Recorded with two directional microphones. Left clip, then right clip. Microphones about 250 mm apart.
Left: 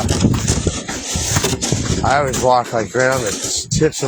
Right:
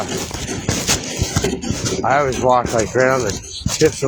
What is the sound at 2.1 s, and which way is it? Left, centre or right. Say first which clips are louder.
Speech: left 1 dB; left.